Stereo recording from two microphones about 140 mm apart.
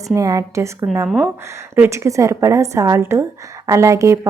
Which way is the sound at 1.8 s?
20° right (ahead or behind).